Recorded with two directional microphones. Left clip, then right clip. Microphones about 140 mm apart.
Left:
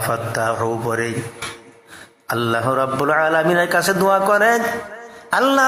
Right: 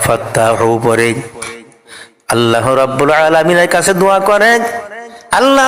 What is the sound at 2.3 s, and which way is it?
A man's voice, 30° right (ahead or behind).